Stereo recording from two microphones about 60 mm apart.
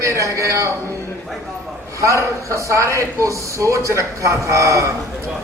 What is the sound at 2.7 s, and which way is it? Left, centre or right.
A man's voice, right.